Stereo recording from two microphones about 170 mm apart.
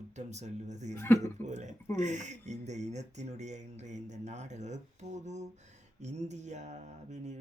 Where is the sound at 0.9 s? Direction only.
10° left (ahead or behind).